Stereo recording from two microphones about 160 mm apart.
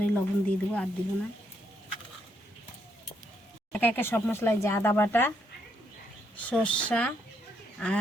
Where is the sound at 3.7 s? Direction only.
10° left (ahead or behind).